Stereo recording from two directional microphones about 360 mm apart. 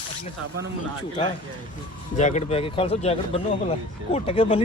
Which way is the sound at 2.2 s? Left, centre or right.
Centre.